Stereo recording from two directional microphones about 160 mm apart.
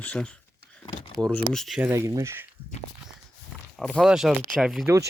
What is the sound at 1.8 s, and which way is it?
Speech, 15° right (ahead or behind).